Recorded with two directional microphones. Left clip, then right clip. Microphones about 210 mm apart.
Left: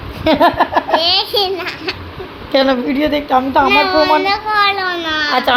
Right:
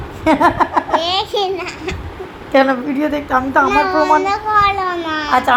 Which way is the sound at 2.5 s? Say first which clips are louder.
Even; 20° left (ahead or behind).